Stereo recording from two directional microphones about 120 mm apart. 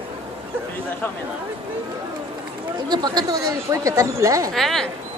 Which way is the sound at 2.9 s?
35° right (ahead or behind).